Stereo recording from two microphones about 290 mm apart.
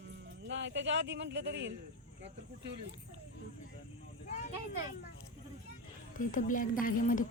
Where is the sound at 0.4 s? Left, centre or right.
Right.